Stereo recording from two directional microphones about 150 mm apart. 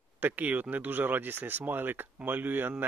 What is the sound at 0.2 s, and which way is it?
Speech, 10° right (ahead or behind).